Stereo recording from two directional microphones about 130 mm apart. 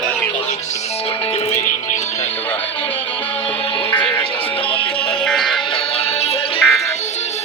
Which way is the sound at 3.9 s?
40° left (ahead or behind).